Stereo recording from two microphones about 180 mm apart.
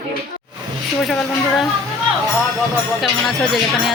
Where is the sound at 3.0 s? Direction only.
Centre (ahead or behind).